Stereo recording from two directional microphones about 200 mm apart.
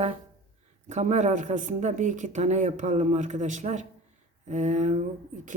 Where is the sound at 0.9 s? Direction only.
35° right (ahead or behind).